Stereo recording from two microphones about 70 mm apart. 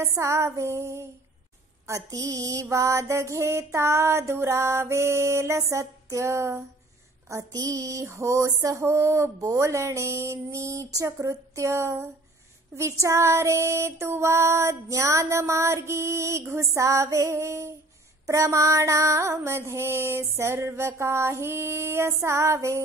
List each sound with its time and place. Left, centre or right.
0.0 s female singing: right
1.9 s female singing: right
7.2 s female singing: right